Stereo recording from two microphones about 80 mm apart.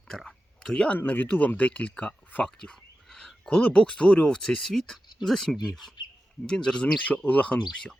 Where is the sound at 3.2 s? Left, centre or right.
Centre.